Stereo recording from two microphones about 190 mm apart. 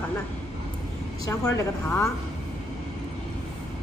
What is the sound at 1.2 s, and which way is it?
Speech, 15° left (ahead or behind).